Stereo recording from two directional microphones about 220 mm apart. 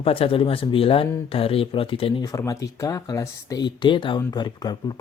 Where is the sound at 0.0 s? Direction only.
25° left (ahead or behind).